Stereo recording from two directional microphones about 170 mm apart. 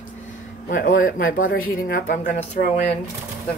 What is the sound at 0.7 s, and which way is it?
Speech, 50° left (ahead or behind).